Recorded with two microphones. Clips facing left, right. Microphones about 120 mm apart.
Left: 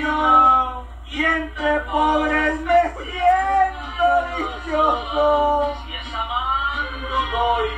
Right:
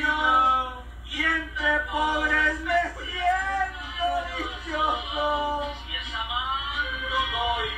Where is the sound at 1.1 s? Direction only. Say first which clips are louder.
Left 7 dB; 50° left (ahead or behind).